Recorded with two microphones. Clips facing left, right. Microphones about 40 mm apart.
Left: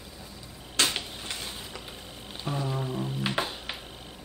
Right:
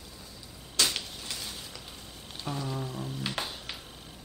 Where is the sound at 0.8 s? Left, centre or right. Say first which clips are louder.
Left 2 dB; left.